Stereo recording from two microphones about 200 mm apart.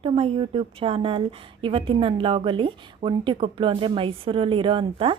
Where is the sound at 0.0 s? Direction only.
30° right (ahead or behind).